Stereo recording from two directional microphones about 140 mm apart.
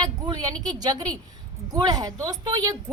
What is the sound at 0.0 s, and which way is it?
Speech, 30° right (ahead or behind).